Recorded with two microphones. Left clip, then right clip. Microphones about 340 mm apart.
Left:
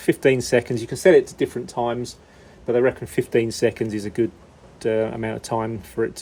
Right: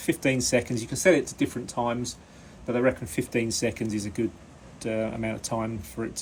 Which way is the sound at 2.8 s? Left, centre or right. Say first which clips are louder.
Left 5 dB; left.